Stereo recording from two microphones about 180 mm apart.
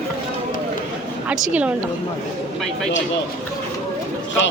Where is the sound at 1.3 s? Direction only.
5° right (ahead or behind).